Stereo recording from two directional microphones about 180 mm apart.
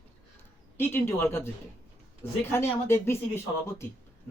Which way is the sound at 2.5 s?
15° left (ahead or behind).